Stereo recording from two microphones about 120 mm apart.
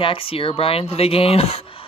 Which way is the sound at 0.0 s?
50° left (ahead or behind).